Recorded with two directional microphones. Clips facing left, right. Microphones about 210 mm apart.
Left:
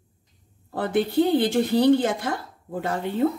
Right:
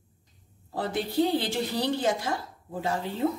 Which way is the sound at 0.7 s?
60° left (ahead or behind).